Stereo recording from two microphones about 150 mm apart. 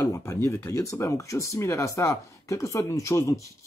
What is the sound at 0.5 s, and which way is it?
Speech, 20° left (ahead or behind).